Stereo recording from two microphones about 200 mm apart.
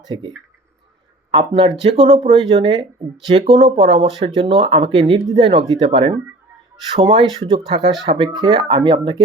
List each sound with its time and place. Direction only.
0.0 s speech: 20° right (ahead or behind)